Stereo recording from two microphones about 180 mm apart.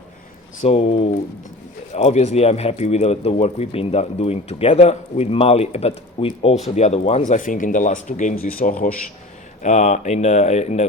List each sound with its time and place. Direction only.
0.6 s speech: 35° left (ahead or behind)
7.3 s speech: 45° left (ahead or behind)